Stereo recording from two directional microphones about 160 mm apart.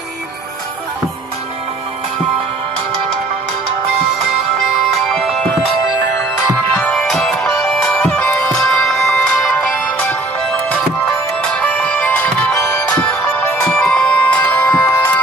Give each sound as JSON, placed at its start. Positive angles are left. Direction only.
{"t": 5.0, "sound": "music", "side_deg": 0}
{"t": 6.8, "sound": "music", "side_deg": 5}
{"t": 12.5, "sound": "music", "side_deg": 20}